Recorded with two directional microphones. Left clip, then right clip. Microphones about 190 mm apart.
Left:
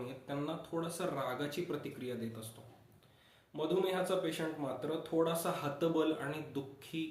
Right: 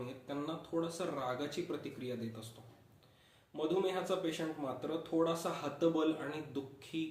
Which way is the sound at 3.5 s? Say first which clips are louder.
Left 1 dB; 15° left (ahead or behind).